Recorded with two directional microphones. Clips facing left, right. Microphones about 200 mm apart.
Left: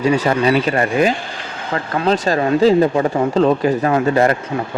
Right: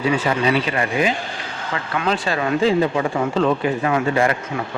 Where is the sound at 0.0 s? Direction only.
40° left (ahead or behind).